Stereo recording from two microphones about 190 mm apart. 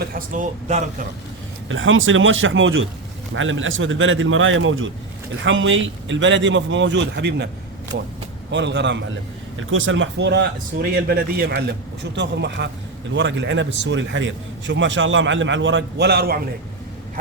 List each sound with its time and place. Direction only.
0.0 s speech: 45° right (ahead or behind)
1.7 s a man's voice: 90° right; by 7.4 s 70° right (ahead or behind)
8.4 s a man's voice: 70° right (ahead or behind)
9.6 s speech: 90° right; by 11.6 s 55° right (ahead or behind)
12.1 s a man's voice: 65° right (ahead or behind)